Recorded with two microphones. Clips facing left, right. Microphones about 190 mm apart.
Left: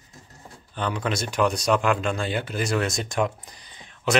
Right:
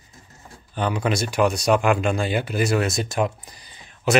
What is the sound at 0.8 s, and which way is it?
Speech, 10° right (ahead or behind).